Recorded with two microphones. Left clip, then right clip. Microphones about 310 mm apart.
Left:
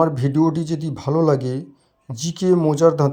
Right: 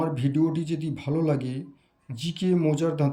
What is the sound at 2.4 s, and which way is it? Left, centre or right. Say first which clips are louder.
Speech: left 9 dB; left.